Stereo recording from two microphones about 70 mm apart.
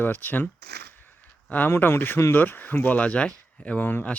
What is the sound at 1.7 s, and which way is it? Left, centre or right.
Speech, left.